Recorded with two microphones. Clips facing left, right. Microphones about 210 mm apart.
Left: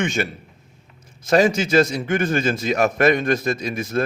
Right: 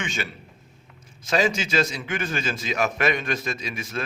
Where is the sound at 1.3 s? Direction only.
55° left (ahead or behind).